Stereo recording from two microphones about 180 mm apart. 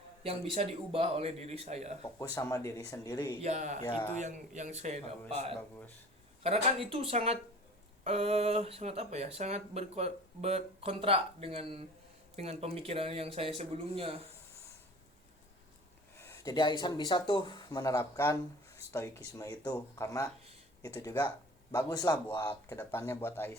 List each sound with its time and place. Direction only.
0.2 s speech: 35° right (ahead or behind)
2.1 s speech: 15° left (ahead or behind)
3.4 s speech: 40° right (ahead or behind)
3.8 s speech: 25° left (ahead or behind)
4.2 s speech: 40° right (ahead or behind)
5.5 s speech: 10° left (ahead or behind)
6.4 s speech: 35° right (ahead or behind)
16.2 s speech: 15° left (ahead or behind)